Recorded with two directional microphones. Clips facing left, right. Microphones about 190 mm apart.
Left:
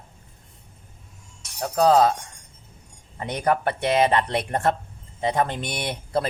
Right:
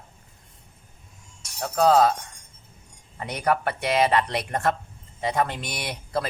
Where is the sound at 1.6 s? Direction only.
15° left (ahead or behind).